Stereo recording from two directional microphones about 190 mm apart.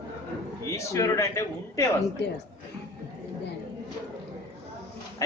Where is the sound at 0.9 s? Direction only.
15° left (ahead or behind).